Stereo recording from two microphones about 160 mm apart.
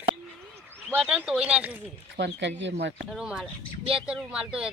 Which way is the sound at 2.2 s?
90° right.